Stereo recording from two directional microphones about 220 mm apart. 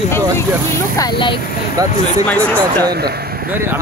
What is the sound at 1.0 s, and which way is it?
Speech, 20° left (ahead or behind).